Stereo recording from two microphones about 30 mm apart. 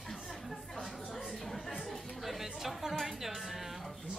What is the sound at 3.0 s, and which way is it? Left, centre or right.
Music, centre.